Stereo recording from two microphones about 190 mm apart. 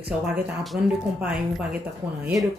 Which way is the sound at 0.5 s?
5° right (ahead or behind).